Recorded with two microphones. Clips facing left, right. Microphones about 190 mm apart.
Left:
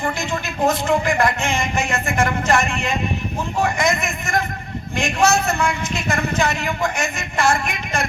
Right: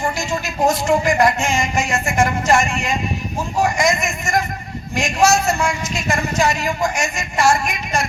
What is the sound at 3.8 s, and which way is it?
Speech, 60° left (ahead or behind).